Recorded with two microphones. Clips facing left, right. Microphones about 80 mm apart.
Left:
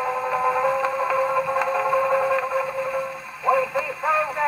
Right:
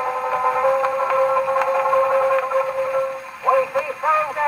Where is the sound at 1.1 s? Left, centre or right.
Centre.